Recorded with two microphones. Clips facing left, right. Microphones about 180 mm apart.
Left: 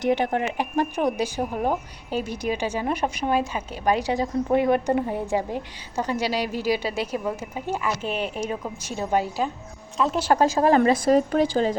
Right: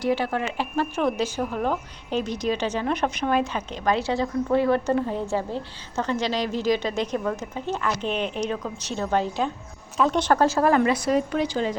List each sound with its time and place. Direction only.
0.0 s a woman's voice: 20° left (ahead or behind)
10.7 s a woman's voice: 40° left (ahead or behind)